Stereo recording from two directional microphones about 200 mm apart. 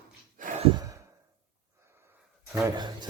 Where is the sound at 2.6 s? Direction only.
20° right (ahead or behind).